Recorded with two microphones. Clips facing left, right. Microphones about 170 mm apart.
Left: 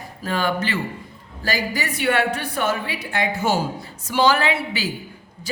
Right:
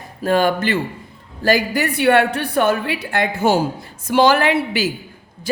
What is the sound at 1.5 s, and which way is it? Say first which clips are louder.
A woman's voice: right 8 dB; 60° right (ahead or behind).